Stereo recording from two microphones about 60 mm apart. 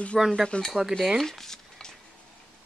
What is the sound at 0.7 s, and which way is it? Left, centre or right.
Speech, centre.